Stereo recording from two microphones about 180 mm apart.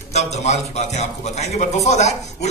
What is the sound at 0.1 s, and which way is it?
A man's voice, 40° left (ahead or behind).